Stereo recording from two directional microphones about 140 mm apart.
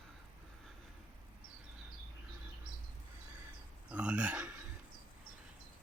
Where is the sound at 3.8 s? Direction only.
10° right (ahead or behind).